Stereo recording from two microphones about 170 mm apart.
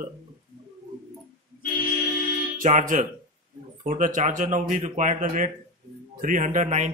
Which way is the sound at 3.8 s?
50° right (ahead or behind).